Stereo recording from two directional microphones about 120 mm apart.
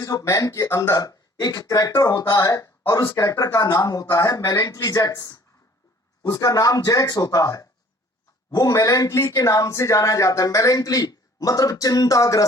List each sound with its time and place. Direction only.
0.0 s speech: 30° left (ahead or behind)